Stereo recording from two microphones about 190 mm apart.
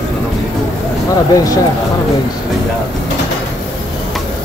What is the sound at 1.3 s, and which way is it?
Speech, 20° left (ahead or behind).